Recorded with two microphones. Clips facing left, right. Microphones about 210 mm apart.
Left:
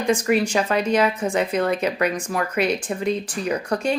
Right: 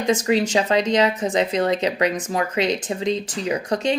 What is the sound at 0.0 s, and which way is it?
Speech, 20° right (ahead or behind).